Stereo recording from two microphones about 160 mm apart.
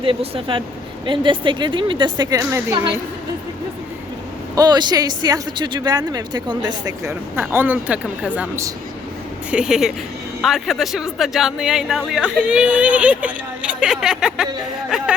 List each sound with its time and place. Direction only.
0.0 s speech: 35° right (ahead or behind); by 2.7 s 15° right (ahead or behind)
4.5 s speech: 25° right (ahead or behind); by 15.1 s 5° right (ahead or behind)